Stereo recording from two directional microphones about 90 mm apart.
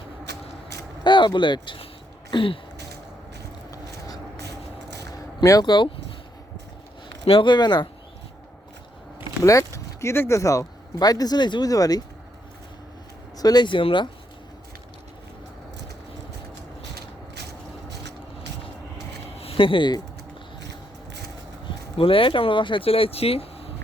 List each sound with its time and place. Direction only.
1.0 s speech: 60° left (ahead or behind)
2.3 s throat clearing: 75° left (ahead or behind)
3.7 s a sound: 40° left (ahead or behind)
5.4 s speech: 45° left (ahead or behind)
7.3 s speech: 65° left (ahead or behind)
9.4 s speech: 35° left (ahead or behind); by 11.7 s 55° left (ahead or behind)
11.7 s speech: 45° left (ahead or behind)
13.3 s speech: 45° left (ahead or behind); by 14.1 s 65° left (ahead or behind)
19.4 s a sound: 85° left
21.7 s speech: 85° left